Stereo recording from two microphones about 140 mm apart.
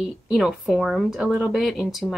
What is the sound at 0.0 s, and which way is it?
Speech, 5° right (ahead or behind).